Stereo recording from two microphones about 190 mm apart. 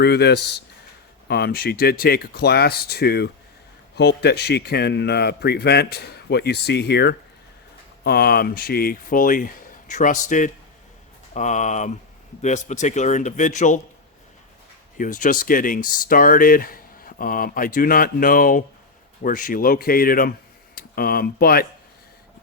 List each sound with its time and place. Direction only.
0.0 s a man's voice: 60° left (ahead or behind); by 13.7 s 40° left (ahead or behind)
14.9 s speech: 45° left (ahead or behind)